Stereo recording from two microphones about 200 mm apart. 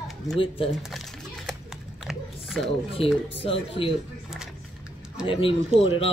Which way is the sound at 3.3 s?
30° left (ahead or behind).